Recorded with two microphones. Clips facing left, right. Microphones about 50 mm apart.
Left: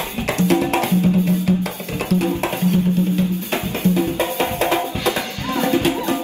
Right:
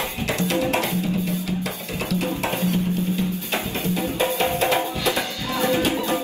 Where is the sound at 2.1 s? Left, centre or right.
Left.